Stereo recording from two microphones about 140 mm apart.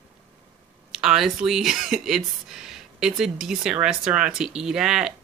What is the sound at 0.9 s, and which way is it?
Speech, 5° right (ahead or behind).